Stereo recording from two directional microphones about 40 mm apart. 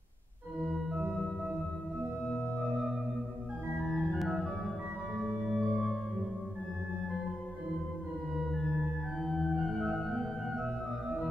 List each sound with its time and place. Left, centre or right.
0.6 s organ: centre
3.8 s organ: centre
5.4 s singing bowl: centre
8.4 s organ: centre
9.5 s music: centre